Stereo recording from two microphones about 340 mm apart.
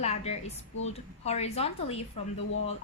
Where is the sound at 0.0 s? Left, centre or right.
Centre.